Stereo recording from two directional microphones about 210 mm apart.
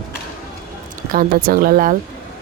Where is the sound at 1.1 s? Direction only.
45° right (ahead or behind).